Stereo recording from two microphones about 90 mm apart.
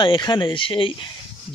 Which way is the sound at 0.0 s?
55° left (ahead or behind).